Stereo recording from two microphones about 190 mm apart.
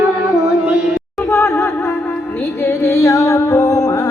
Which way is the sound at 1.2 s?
15° left (ahead or behind).